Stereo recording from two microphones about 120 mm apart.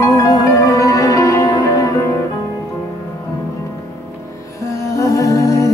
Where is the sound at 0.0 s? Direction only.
30° left (ahead or behind).